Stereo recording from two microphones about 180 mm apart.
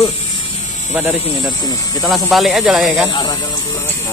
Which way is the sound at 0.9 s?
10° right (ahead or behind).